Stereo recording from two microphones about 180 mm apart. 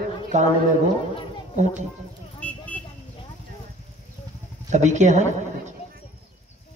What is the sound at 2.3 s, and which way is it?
Vehicle, 10° left (ahead or behind).